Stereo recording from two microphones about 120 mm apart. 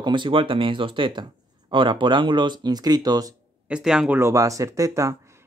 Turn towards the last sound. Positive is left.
turn(degrees=-25)  # may be behind; listen again after turning